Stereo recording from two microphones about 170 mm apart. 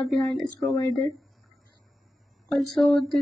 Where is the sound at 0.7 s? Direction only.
20° left (ahead or behind).